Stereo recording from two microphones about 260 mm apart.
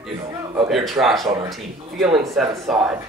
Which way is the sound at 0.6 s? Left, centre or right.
Centre.